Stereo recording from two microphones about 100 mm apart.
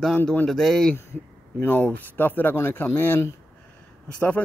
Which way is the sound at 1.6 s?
15° left (ahead or behind).